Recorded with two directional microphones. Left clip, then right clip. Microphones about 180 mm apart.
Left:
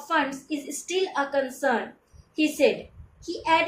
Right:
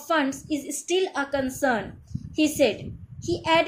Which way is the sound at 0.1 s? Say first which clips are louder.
Right 1 dB; 55° right (ahead or behind).